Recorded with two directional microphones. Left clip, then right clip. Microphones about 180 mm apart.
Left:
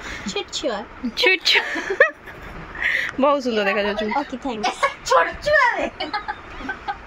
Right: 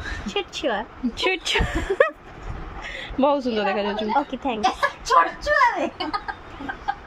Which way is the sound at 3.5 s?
Centre (ahead or behind).